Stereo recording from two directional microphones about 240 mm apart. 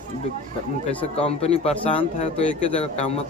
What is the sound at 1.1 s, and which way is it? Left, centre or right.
A man's voice, left.